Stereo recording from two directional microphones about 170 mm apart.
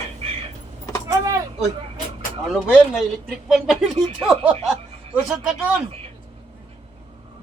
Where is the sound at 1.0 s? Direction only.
20° right (ahead or behind).